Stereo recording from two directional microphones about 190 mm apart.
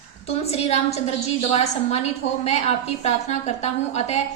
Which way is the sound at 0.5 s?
35° left (ahead or behind).